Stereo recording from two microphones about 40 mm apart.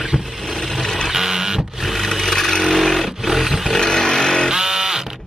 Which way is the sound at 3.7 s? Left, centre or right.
Centre.